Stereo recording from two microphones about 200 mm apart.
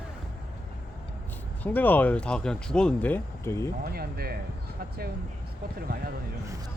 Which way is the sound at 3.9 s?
50° right (ahead or behind).